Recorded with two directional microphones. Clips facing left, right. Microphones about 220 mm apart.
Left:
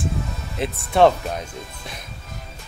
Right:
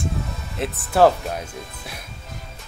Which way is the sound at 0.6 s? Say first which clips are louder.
Even; centre (ahead or behind).